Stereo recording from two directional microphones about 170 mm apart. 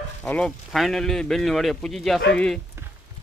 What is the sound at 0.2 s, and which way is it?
Speech, 10° left (ahead or behind).